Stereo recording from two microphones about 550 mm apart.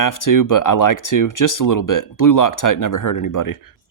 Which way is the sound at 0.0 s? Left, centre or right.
Left.